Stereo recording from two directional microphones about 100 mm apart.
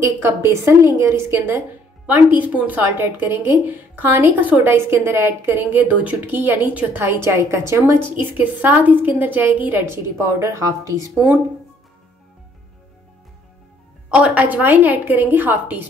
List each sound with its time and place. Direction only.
0.0 s a woman's voice: 25° right (ahead or behind)
8.2 s a woman's voice: 20° right (ahead or behind)
14.1 s a woman's voice: 10° right (ahead or behind)